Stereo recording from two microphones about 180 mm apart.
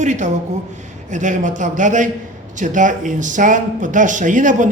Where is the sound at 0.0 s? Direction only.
40° right (ahead or behind).